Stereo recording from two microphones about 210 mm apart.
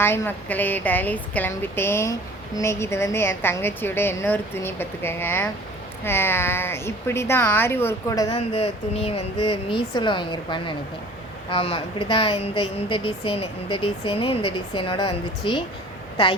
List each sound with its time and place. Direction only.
0.0 s a woman's voice: 10° left (ahead or behind)
8.4 s speech: 30° left (ahead or behind)